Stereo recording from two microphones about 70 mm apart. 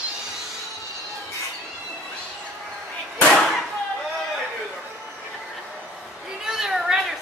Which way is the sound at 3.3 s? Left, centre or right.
Centre.